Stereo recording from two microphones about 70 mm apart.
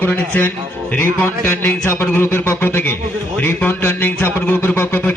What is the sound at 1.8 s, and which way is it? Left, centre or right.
A man's voice, left.